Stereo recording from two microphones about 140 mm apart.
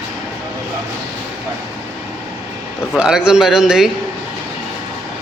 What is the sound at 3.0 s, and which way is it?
Speech, 5° right (ahead or behind).